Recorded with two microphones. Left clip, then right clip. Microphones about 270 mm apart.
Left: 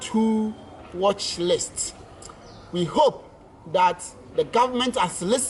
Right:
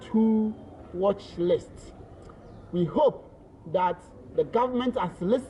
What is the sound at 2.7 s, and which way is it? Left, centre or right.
Speech, centre.